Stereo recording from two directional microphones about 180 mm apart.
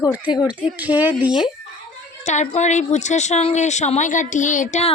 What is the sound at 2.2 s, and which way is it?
A woman's voice, 40° left (ahead or behind).